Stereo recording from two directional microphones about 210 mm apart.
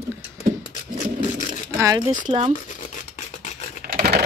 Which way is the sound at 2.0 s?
30° right (ahead or behind).